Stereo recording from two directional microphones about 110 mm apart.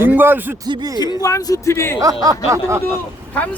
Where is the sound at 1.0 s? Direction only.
35° left (ahead or behind).